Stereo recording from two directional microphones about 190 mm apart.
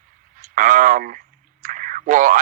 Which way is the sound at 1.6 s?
45° right (ahead or behind).